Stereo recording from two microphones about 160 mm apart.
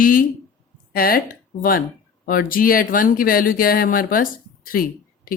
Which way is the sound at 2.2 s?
65° left (ahead or behind).